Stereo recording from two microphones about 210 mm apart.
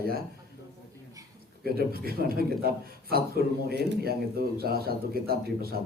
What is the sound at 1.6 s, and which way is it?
Speech, 45° right (ahead or behind).